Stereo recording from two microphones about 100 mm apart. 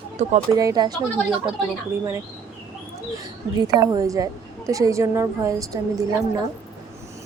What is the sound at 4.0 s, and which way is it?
A woman's voice, 35° right (ahead or behind).